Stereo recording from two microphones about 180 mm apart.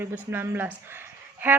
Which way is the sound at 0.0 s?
10° right (ahead or behind).